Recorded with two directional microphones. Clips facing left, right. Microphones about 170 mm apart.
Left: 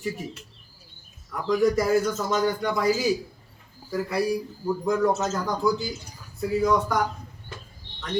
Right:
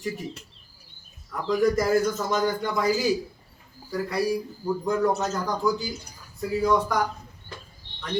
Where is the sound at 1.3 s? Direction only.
Centre (ahead or behind).